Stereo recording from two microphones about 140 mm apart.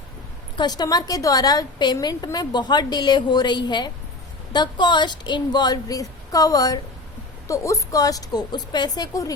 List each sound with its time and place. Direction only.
0.5 s a woman's voice: 30° left (ahead or behind)